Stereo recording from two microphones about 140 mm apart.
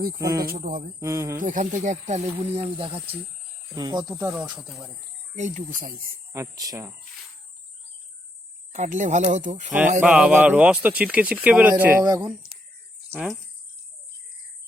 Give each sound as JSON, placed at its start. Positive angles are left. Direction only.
{"t": 0.2, "sound": "speech", "side_deg": -25}
{"t": 0.6, "sound": "speech", "side_deg": -80}
{"t": 0.9, "sound": "speech", "side_deg": -20}
{"t": 1.4, "sound": "speech", "side_deg": -65}
{"t": 3.8, "sound": "speech", "side_deg": -30}
{"t": 5.3, "sound": "speech", "side_deg": -65}
{"t": 6.3, "sound": "speech", "side_deg": -25}
{"t": 8.7, "sound": "speech", "side_deg": -60}
{"t": 10.0, "sound": "speech", "side_deg": -10}
{"t": 12.0, "sound": "speech", "side_deg": -25}